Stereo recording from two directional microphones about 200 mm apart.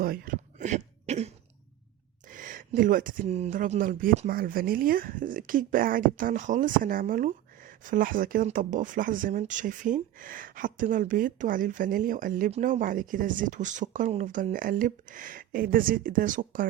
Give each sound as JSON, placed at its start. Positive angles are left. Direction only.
{"t": 0.0, "sound": "cough", "side_deg": -45}
{"t": 2.3, "sound": "speech", "side_deg": -40}